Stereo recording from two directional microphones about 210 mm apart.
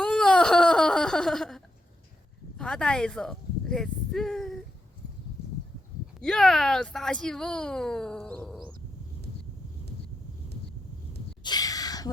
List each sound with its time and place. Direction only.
0.0 s baby cry: 5° left (ahead or behind)
2.6 s speech: 5° left (ahead or behind)
6.1 s speech: centre (ahead or behind)
11.4 s a sound: 20° left (ahead or behind)